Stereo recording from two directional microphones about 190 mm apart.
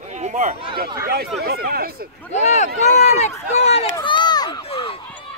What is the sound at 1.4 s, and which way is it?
Speech, 55° right (ahead or behind).